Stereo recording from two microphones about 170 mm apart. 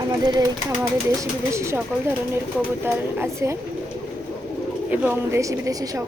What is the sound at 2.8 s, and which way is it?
Speech, 15° right (ahead or behind).